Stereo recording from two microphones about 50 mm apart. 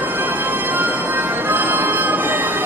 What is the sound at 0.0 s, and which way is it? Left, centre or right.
Music, right.